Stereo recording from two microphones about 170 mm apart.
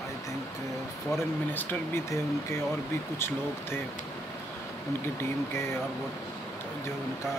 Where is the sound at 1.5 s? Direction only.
15° left (ahead or behind).